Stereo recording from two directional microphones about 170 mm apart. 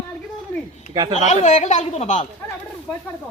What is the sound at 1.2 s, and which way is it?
Speech, 45° left (ahead or behind).